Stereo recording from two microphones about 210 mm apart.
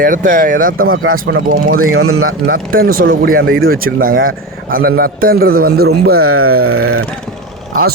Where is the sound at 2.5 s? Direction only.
45° right (ahead or behind).